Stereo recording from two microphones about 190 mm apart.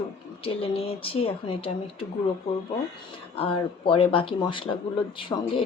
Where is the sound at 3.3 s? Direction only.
30° left (ahead or behind).